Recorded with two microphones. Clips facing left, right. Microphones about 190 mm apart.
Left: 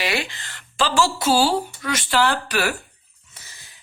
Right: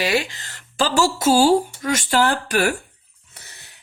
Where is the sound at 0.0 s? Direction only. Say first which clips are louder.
Right 4 dB; 40° right (ahead or behind).